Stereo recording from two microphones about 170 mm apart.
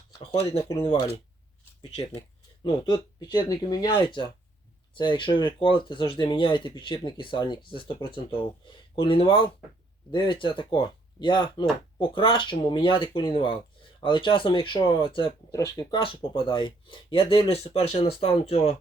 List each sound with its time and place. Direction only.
0.2 s speech: 35° left (ahead or behind)
2.6 s speech: 25° left (ahead or behind)
9.0 s speech: 30° left (ahead or behind)
15.5 s speech: 20° left (ahead or behind)
16.0 s speech: 30° left (ahead or behind)